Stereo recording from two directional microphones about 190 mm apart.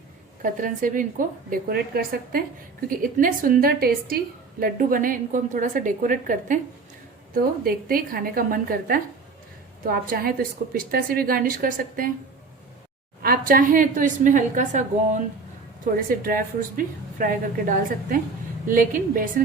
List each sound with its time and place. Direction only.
0.4 s a woman's voice: 45° right (ahead or behind)
13.2 s a woman's voice: 50° right (ahead or behind)